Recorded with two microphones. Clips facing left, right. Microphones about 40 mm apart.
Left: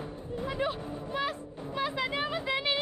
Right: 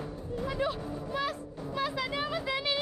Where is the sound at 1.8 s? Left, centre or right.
Left.